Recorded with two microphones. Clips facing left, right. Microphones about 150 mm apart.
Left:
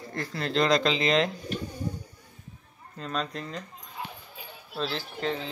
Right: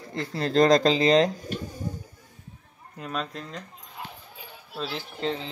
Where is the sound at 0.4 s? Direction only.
40° right (ahead or behind).